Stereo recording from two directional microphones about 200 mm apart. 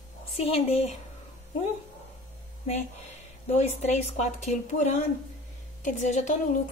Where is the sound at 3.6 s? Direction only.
35° left (ahead or behind).